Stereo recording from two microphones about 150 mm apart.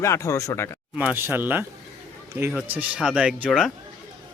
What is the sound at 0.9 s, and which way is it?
Speech, 10° right (ahead or behind).